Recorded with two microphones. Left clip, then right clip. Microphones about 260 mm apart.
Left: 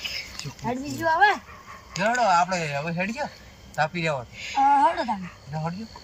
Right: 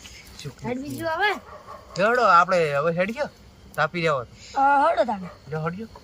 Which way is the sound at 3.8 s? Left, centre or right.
Centre.